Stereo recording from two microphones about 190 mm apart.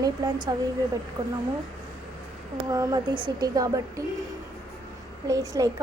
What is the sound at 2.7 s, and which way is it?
A woman's voice, 20° right (ahead or behind).